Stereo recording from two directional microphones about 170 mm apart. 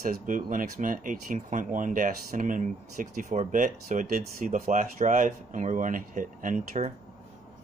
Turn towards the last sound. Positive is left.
turn(degrees=-45)  # may be behind; listen again after turning